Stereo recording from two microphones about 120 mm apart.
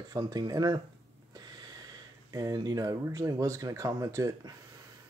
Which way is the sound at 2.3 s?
30° right (ahead or behind).